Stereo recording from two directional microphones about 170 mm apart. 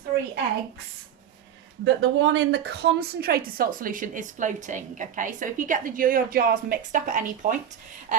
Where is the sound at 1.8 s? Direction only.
90° right.